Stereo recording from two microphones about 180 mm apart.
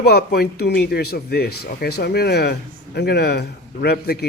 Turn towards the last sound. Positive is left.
turn(degrees=65)  # may be behind; listen again after turning